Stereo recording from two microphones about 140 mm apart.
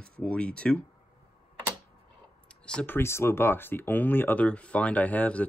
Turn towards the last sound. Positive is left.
turn(degrees=10)  # may be behind; listen again after turning